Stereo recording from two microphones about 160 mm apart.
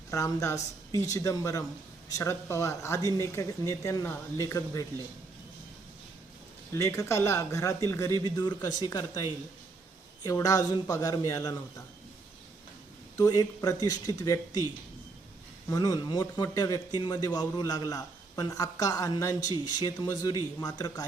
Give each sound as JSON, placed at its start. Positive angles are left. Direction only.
{"t": 0.1, "sound": "speech", "side_deg": 20}
{"t": 6.7, "sound": "speech", "side_deg": 20}
{"t": 13.1, "sound": "speech", "side_deg": 25}
{"t": 15.7, "sound": "speech", "side_deg": 25}